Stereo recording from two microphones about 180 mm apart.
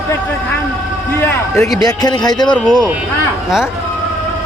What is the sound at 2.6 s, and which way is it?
Speech, 5° left (ahead or behind).